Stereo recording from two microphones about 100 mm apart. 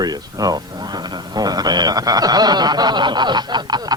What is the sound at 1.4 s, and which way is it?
Speech, 40° right (ahead or behind).